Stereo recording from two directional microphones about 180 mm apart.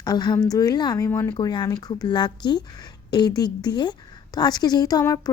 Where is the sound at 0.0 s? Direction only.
20° left (ahead or behind).